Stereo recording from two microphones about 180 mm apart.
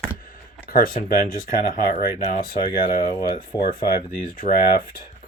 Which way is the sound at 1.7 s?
40° left (ahead or behind).